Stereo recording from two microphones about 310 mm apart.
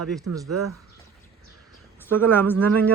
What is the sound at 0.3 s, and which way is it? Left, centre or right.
Speech, right.